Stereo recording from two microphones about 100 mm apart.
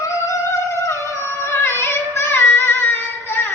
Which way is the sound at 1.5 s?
25° left (ahead or behind).